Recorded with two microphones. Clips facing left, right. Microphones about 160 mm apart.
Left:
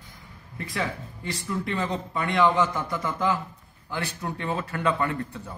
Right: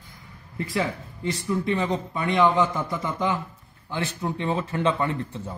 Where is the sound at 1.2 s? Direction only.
20° right (ahead or behind).